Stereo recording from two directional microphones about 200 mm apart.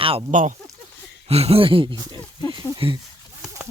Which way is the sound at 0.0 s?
25° right (ahead or behind).